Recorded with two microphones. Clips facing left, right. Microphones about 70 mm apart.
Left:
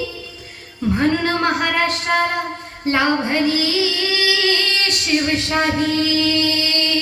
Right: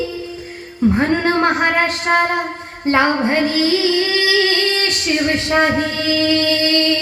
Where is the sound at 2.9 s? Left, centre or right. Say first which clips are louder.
Right 3 dB; right.